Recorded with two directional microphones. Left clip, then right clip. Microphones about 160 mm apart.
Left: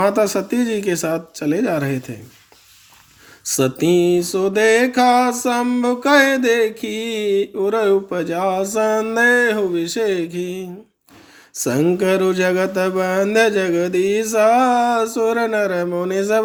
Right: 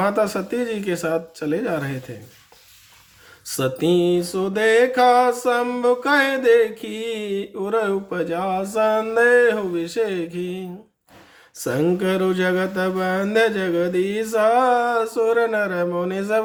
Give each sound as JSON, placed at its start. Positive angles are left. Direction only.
{"t": 0.0, "sound": "music", "side_deg": 20}
{"t": 3.4, "sound": "music", "side_deg": 25}